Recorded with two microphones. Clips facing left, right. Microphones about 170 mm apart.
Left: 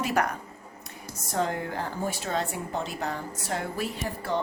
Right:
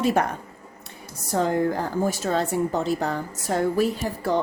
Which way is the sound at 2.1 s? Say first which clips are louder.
Right 6 dB; 40° right (ahead or behind).